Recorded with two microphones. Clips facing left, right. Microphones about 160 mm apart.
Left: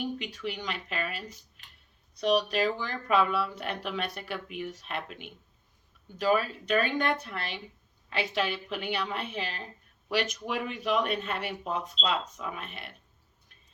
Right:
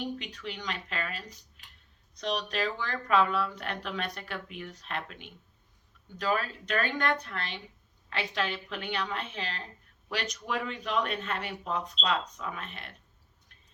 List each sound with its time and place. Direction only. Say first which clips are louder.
0.0 s speech: left 3 dB; 15° left (ahead or behind)